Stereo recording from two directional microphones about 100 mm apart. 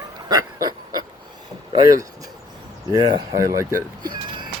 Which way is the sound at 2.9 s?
45° right (ahead or behind).